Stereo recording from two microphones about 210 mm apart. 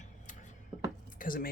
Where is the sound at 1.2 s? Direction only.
40° left (ahead or behind).